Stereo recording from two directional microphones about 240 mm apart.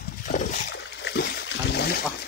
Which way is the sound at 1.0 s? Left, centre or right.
Left.